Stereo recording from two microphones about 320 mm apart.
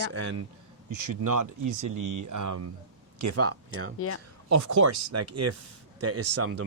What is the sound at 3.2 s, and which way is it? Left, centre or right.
Speech, right.